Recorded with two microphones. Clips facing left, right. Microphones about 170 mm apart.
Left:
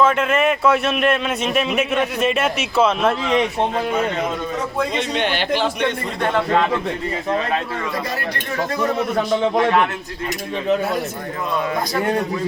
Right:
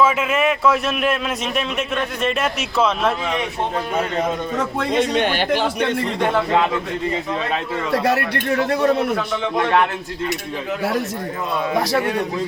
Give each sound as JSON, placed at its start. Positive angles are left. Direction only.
{"t": 0.0, "sound": "speech", "side_deg": -5}
{"t": 4.9, "sound": "speech", "side_deg": -45}
{"t": 7.9, "sound": "speech", "side_deg": -70}